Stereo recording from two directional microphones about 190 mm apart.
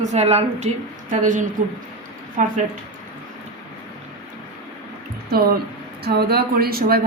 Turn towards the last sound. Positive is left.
turn(degrees=-50)  # may be behind; listen again after turning